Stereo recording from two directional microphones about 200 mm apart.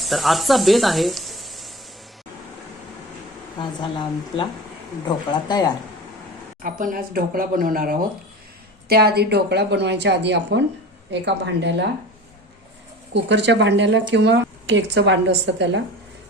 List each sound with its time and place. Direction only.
0.0 s speech: centre (ahead or behind)
3.6 s speech: 25° left (ahead or behind)
6.6 s a woman's voice: 40° right (ahead or behind); by 11.7 s 60° right (ahead or behind)
13.1 s a woman's voice: 60° right (ahead or behind)